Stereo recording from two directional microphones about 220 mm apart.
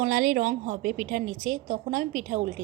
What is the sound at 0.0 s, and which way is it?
A woman's voice, 40° right (ahead or behind).